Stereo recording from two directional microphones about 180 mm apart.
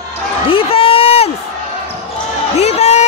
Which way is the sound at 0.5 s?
30° left (ahead or behind).